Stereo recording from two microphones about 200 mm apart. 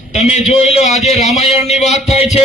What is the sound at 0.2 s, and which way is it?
A man's voice, 35° left (ahead or behind).